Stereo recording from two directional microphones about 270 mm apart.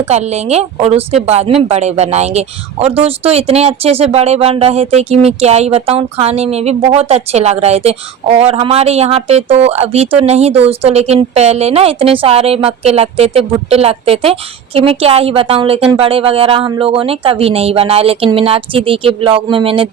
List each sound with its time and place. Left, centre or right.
0.1 s speech: right